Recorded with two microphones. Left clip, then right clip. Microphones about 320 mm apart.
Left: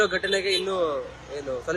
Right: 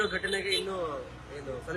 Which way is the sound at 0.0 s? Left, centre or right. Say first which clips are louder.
Left 7 dB; centre.